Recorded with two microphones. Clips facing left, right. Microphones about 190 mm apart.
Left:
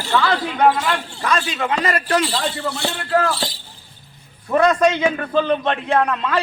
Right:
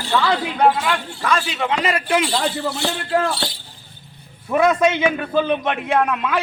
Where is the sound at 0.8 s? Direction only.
5° right (ahead or behind).